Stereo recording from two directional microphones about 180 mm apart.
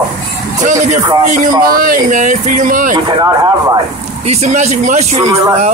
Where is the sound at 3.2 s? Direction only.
20° right (ahead or behind).